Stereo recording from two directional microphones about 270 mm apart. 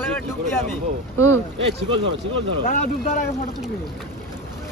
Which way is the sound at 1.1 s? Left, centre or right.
Centre.